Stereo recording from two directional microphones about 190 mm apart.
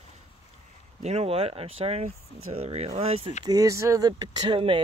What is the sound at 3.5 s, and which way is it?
Speech, 15° right (ahead or behind).